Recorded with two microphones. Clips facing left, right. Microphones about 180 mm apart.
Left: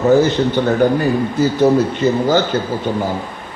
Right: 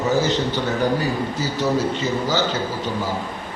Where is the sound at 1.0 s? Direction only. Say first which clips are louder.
Left 8 dB; 55° left (ahead or behind).